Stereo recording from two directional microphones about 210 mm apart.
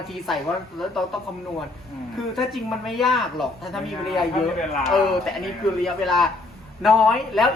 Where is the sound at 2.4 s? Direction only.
Centre (ahead or behind).